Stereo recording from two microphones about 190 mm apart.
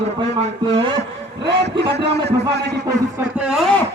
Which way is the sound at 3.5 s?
Centre (ahead or behind).